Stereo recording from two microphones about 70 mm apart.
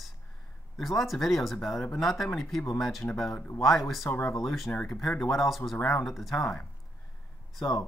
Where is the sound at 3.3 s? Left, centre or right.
Left.